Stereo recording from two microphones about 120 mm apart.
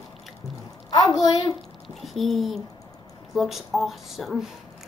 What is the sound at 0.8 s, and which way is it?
Speech, 30° left (ahead or behind).